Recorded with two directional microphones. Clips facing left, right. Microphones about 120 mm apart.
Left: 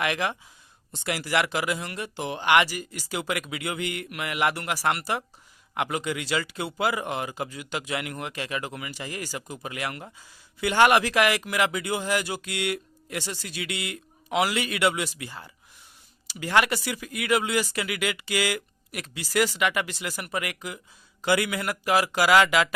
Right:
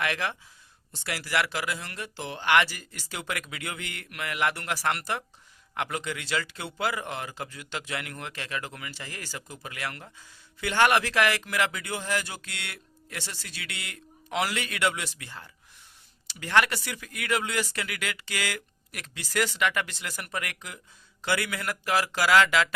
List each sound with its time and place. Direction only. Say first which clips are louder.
0.0 s speech: left 3 dB; 15° left (ahead or behind)